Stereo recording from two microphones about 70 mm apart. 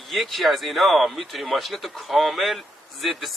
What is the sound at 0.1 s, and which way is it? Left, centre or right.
Speech, centre.